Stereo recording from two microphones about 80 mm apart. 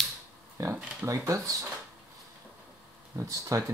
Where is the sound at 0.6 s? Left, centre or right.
Right.